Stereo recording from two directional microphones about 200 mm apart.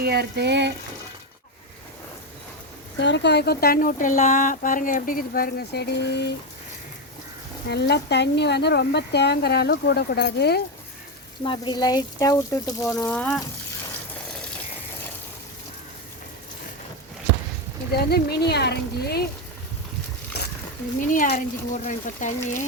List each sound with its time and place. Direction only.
0.0 s frying: 55° right (ahead or behind)
3.0 s speech: 60° left (ahead or behind)
7.7 s speech: 55° left (ahead or behind)
11.4 s speech: 20° left (ahead or behind)
13.1 s speech: 5° left (ahead or behind)
17.9 s speech: 55° left (ahead or behind)
20.4 s a sound: 55° left (ahead or behind)
21.1 s speech: 40° left (ahead or behind)